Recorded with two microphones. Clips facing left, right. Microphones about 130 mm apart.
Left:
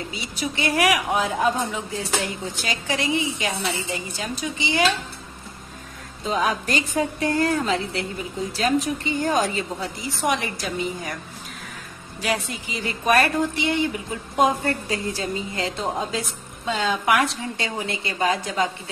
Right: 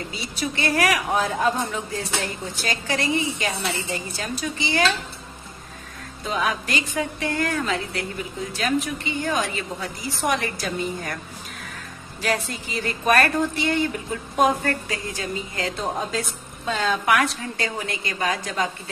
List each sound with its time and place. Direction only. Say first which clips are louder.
0.4 s a woman's voice: left 1 dB; 15° left (ahead or behind)
2.7 s a woman's voice: even; 20° left (ahead or behind)
6.3 s a woman's voice: left 2 dB; 35° left (ahead or behind)
10.2 s a woman's voice: even; 20° left (ahead or behind)
12.2 s a woman's voice: right 1 dB; 15° left (ahead or behind)
15.8 s a woman's voice: right 1 dB; centre (ahead or behind)
16.6 s a woman's voice: even; 15° left (ahead or behind)